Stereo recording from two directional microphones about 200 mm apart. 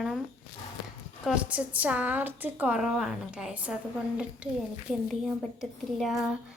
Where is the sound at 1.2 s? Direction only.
5° right (ahead or behind).